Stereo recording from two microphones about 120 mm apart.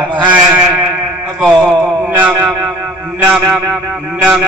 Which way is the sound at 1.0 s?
15° right (ahead or behind).